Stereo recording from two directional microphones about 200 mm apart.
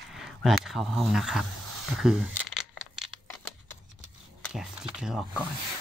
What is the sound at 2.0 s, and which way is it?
Crumpling, centre (ahead or behind).